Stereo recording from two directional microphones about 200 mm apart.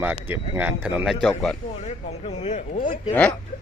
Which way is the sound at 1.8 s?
35° left (ahead or behind).